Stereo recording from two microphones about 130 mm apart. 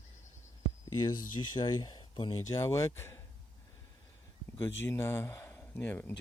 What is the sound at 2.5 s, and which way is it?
Speech, 25° left (ahead or behind).